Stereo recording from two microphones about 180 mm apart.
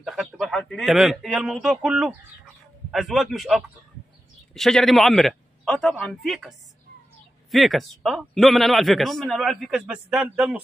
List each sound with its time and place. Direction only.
0.0 s a man's voice: centre (ahead or behind)
7.5 s a man's voice: centre (ahead or behind)